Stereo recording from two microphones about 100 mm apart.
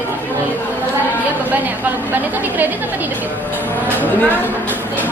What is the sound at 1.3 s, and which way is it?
A woman's voice, 15° right (ahead or behind).